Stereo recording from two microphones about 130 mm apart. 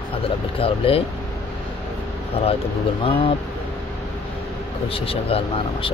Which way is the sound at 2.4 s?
50° left (ahead or behind).